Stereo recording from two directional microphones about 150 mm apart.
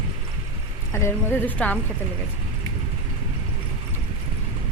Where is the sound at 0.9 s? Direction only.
15° left (ahead or behind).